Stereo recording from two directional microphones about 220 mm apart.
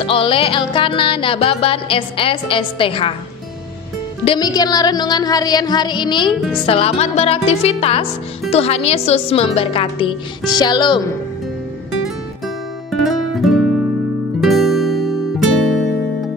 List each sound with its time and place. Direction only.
0.0 s music: 25° left (ahead or behind)
4.2 s music: 20° left (ahead or behind)
12.9 s music: centre (ahead or behind)